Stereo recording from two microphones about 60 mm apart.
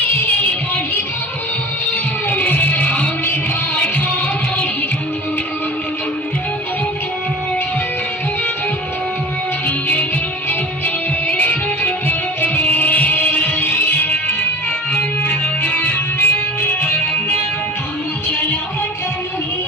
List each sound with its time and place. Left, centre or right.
2.3 s music: left
9.6 s music: left
15.2 s music: left